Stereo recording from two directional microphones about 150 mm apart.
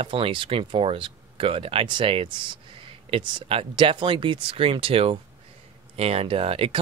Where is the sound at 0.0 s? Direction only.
35° right (ahead or behind).